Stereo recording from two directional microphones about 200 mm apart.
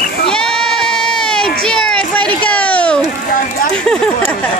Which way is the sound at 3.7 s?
5° left (ahead or behind).